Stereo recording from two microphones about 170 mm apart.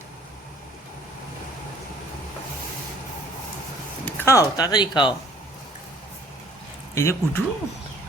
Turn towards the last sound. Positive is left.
turn(degrees=15)  # may be behind; listen again after turning